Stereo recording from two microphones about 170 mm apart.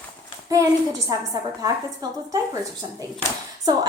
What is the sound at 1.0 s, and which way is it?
A woman's voice, 20° right (ahead or behind).